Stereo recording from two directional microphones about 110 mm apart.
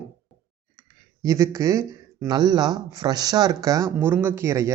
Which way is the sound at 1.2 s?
30° right (ahead or behind).